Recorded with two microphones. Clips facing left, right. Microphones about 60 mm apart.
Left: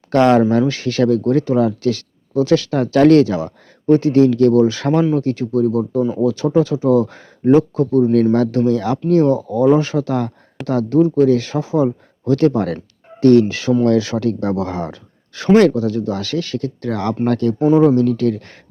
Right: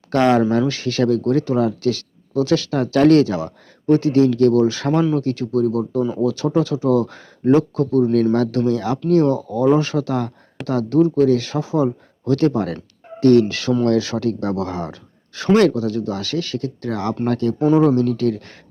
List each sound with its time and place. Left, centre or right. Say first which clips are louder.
0.1 s speech: left 3 dB; left
17.6 s speech: left 2 dB; centre
18.2 s speech: left 2 dB; left